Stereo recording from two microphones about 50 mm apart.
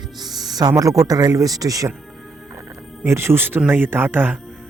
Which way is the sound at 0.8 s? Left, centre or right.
Right.